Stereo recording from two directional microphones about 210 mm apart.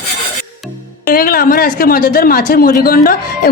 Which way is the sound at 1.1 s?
45° left (ahead or behind).